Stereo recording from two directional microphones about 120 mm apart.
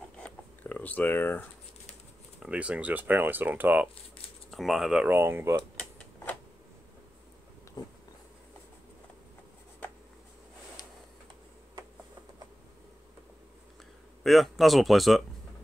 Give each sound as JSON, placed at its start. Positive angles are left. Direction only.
{"t": 0.2, "sound": "a sound", "side_deg": 15}
{"t": 2.4, "sound": "speech", "side_deg": -10}
{"t": 4.5, "sound": "speech", "side_deg": 0}
{"t": 5.8, "sound": "typewriter", "side_deg": 10}
{"t": 7.8, "sound": "a sound", "side_deg": 40}
{"t": 14.2, "sound": "speech", "side_deg": 0}